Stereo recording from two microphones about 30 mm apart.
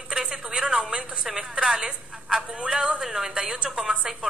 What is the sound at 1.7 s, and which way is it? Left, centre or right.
A woman's voice, right.